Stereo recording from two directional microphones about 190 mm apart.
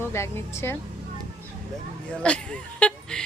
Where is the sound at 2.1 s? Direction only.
5° left (ahead or behind).